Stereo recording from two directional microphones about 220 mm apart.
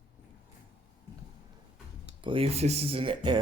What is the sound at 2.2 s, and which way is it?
Speech, 25° right (ahead or behind).